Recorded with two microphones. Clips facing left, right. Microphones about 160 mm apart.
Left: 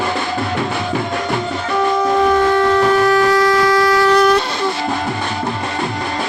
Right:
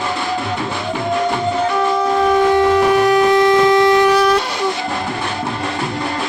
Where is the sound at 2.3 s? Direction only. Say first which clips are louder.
Right 1 dB; 15° right (ahead or behind).